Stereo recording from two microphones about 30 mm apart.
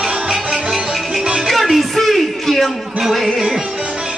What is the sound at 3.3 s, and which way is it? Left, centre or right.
Music, centre.